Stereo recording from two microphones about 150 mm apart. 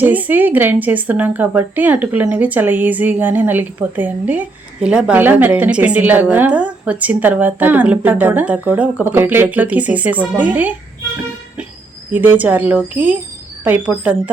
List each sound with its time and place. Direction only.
0.0 s a woman's voice: 10° right (ahead or behind)
12.1 s a woman's voice: 10° right (ahead or behind)